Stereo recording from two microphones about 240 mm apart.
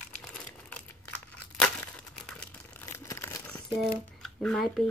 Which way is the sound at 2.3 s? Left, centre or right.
Centre.